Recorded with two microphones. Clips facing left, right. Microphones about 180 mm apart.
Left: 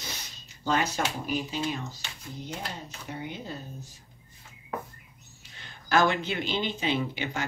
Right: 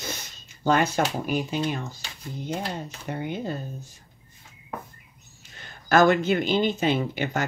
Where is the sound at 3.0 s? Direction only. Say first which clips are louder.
Right 7 dB; 55° right (ahead or behind).